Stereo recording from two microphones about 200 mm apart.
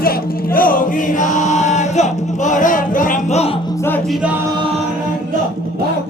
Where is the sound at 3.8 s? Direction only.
10° left (ahead or behind).